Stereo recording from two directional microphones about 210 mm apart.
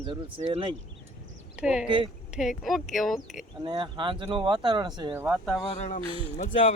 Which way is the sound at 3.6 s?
20° right (ahead or behind).